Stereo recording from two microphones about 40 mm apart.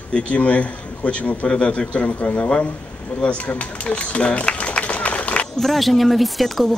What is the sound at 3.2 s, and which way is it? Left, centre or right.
Run, left.